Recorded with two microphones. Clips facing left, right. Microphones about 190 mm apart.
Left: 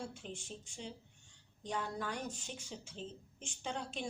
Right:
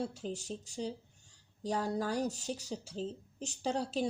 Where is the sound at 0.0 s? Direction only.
40° right (ahead or behind).